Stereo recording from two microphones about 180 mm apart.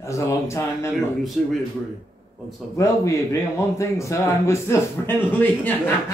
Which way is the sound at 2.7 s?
15° left (ahead or behind).